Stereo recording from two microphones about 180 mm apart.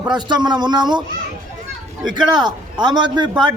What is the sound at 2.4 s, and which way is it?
Speech, 25° right (ahead or behind).